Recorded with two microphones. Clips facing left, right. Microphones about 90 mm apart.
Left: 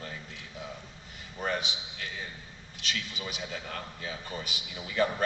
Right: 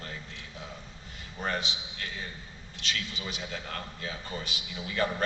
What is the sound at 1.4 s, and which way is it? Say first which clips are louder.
A man's voice: even; 5° left (ahead or behind).